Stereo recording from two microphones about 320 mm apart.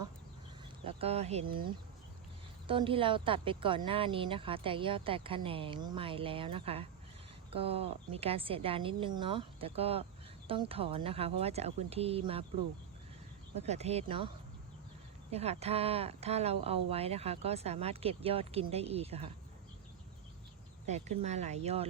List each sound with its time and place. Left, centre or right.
0.9 s speech: centre
13.6 s speech: centre
15.3 s speech: centre
20.8 s speech: right